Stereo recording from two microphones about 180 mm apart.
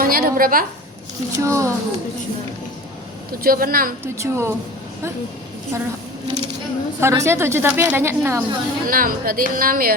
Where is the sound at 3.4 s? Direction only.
55° right (ahead or behind).